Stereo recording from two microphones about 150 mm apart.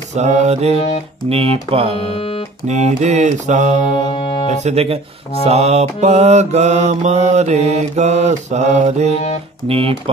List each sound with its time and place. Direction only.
0.1 s mantra: 50° right (ahead or behind)
1.3 s music: 40° right (ahead or behind)
2.1 s music: 40° left (ahead or behind)
2.6 s mantra: 50° right (ahead or behind)
4.2 s speech: 40° left (ahead or behind)
4.5 s mantra: 45° right (ahead or behind)
9.7 s music: 40° right (ahead or behind)